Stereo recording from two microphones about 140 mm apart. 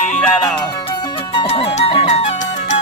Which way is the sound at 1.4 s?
45° left (ahead or behind).